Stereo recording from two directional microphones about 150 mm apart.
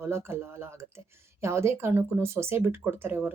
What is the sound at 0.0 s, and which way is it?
Speech, 15° right (ahead or behind).